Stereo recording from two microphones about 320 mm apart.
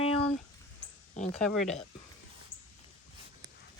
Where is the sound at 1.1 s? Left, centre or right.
Left.